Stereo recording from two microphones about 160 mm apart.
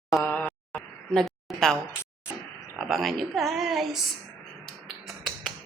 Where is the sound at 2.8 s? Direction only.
Centre (ahead or behind).